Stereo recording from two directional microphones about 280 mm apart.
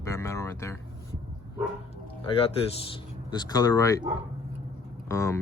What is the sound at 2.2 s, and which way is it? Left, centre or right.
Speech, centre.